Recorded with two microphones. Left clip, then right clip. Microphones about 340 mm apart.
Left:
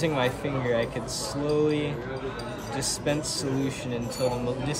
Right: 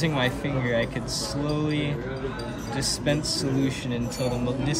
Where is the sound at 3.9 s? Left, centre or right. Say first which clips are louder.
Left 4 dB; left.